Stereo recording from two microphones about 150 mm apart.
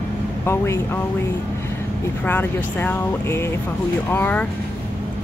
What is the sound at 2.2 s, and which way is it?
Speech, 15° left (ahead or behind).